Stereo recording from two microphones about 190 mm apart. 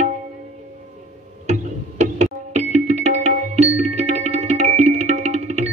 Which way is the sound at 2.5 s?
35° right (ahead or behind).